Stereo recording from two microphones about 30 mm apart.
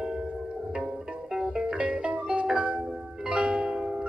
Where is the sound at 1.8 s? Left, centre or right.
Right.